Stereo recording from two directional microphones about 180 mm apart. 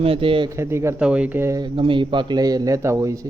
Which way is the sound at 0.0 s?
30° right (ahead or behind).